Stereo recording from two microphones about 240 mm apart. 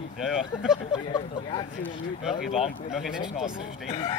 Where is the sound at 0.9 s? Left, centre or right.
Centre.